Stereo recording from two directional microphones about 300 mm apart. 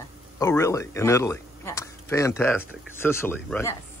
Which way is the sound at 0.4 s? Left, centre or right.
Centre.